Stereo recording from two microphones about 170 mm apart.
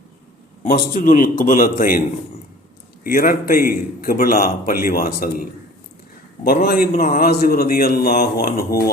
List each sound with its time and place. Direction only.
0.6 s a man's voice: 50° left (ahead or behind)
3.0 s a man's voice: 60° left (ahead or behind)